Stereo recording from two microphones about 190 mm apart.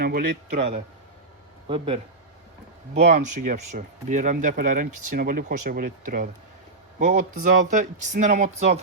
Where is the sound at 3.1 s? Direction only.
40° right (ahead or behind).